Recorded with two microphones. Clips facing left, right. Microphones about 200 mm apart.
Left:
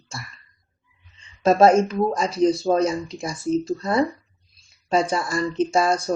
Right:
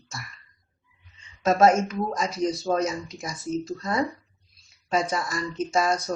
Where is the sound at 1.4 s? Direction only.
30° left (ahead or behind).